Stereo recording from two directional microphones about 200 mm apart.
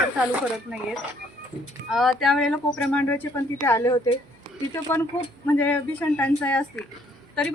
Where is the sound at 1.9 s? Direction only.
Centre (ahead or behind).